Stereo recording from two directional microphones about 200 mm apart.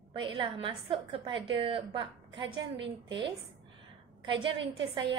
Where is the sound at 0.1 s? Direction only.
25° right (ahead or behind).